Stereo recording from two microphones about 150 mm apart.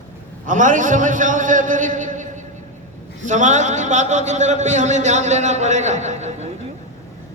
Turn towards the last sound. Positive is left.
turn(degrees=-50)  # may be behind; listen again after turning